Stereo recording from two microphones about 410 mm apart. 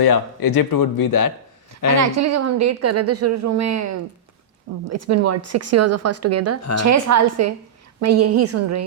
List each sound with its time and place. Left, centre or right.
0.0 s speech: left
2.0 s a woman's voice: right